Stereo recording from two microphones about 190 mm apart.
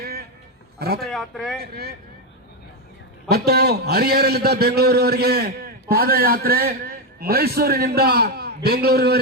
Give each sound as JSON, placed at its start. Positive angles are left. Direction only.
{"t": 0.0, "sound": "sheep", "side_deg": -55}
{"t": 0.8, "sound": "a man's voice", "side_deg": -55}
{"t": 1.1, "sound": "speech", "side_deg": 0}
{"t": 1.6, "sound": "a man's voice", "side_deg": -55}
{"t": 3.2, "sound": "a man's voice", "side_deg": -55}